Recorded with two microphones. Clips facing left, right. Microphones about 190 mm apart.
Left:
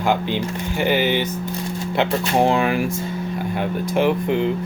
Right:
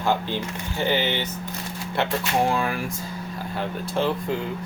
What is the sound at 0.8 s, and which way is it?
Speech, 10° left (ahead or behind).